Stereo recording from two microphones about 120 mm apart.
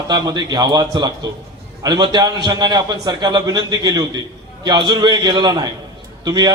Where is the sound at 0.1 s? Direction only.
35° right (ahead or behind).